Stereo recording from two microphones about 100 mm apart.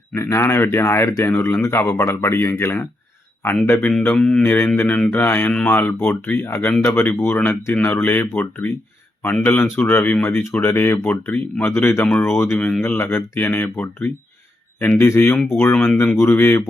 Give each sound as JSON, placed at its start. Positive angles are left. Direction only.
{"t": 0.1, "sound": "speech", "side_deg": 30}
{"t": 4.0, "sound": "mantra", "side_deg": 10}
{"t": 4.4, "sound": "speech", "side_deg": 20}
{"t": 4.8, "sound": "mantra", "side_deg": 15}
{"t": 5.1, "sound": "speech", "side_deg": 20}
{"t": 15.7, "sound": "mantra", "side_deg": 10}
{"t": 16.0, "sound": "speech", "side_deg": 20}